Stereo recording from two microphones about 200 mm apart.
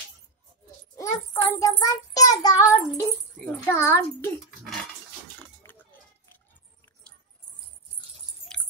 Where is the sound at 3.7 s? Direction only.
10° left (ahead or behind).